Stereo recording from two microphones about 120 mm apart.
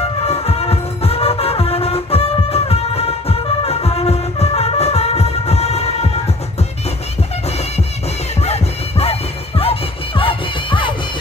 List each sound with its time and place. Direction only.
0.0 s music: 55° left (ahead or behind)
8.4 s music: 60° left (ahead or behind); by 11.0 s 45° left (ahead or behind)